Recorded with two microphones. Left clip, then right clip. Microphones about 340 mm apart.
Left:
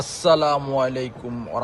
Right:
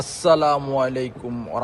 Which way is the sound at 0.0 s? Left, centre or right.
Centre.